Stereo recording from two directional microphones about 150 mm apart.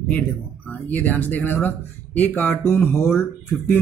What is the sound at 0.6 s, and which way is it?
Speech, 10° left (ahead or behind).